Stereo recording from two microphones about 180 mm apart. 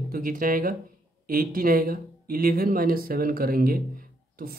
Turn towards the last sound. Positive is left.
turn(degrees=-55)  # may be behind; listen again after turning